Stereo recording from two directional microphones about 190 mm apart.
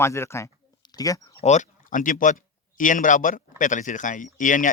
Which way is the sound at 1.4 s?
40° left (ahead or behind).